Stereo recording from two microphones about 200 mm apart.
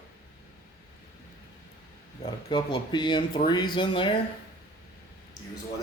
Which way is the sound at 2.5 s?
20° left (ahead or behind).